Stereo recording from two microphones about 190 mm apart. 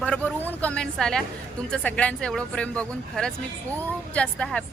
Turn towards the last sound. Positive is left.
turn(degrees=5)  # may be behind; listen again after turning